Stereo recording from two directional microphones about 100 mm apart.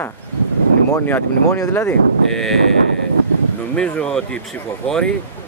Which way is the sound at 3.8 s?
10° left (ahead or behind).